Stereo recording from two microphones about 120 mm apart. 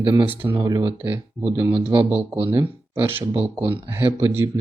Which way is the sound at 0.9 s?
20° right (ahead or behind).